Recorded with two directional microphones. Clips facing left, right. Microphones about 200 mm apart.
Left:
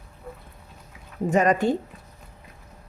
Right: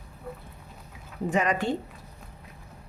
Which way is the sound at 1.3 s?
45° left (ahead or behind).